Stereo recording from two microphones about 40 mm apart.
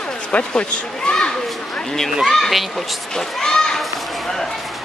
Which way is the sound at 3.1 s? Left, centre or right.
Centre.